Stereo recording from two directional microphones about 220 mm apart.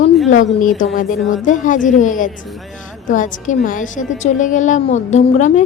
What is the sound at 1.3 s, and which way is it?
A woman's voice, 35° left (ahead or behind).